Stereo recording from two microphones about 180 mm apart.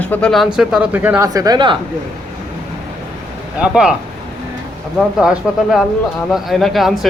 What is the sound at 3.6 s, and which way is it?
Speech, 5° right (ahead or behind).